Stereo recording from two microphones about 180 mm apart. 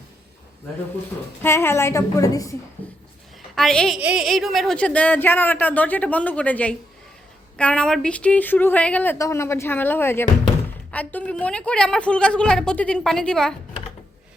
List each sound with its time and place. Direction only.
1.4 s a woman's voice: 15° left (ahead or behind)